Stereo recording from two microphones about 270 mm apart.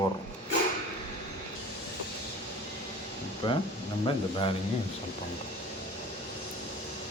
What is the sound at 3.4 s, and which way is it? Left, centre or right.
Speech, centre.